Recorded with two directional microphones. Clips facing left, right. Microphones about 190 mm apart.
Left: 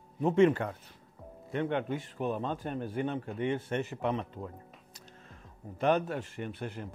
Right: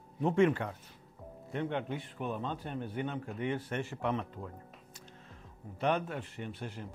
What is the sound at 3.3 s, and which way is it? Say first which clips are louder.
Speech: left 3 dB; 25° left (ahead or behind).